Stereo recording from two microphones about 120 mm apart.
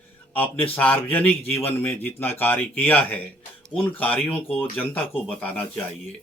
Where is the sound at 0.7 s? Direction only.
15° left (ahead or behind).